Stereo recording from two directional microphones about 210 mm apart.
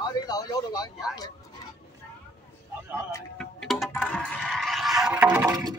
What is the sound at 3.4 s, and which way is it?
Music, centre (ahead or behind).